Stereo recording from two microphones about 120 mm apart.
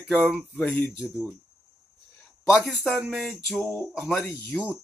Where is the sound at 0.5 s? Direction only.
15° left (ahead or behind).